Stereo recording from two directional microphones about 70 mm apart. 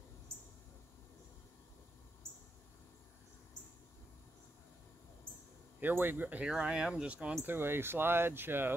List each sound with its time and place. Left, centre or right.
5.8 s speech: right
6.4 s speech: centre
7.4 s speech: right